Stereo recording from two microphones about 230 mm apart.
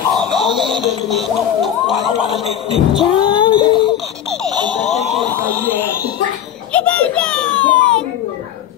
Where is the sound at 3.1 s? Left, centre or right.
Left.